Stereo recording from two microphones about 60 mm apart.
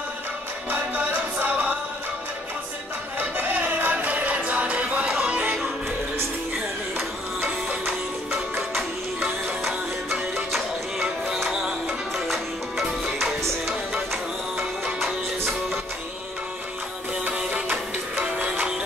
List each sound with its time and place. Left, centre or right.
0.7 s music: right
3.2 s music: right
8.3 s music: centre
10.3 s music: centre
15.0 s music: centre
17.4 s music: right
18.2 s music: centre